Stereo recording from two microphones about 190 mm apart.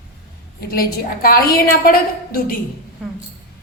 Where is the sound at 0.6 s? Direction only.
50° left (ahead or behind).